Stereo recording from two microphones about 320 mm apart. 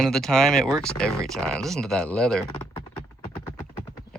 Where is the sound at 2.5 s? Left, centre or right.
Centre.